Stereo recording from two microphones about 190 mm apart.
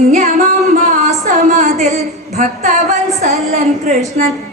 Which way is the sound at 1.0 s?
35° right (ahead or behind).